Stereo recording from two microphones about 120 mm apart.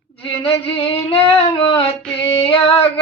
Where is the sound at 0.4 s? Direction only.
50° left (ahead or behind).